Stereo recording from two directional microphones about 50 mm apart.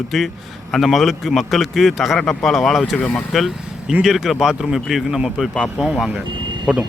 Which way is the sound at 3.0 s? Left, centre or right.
Left.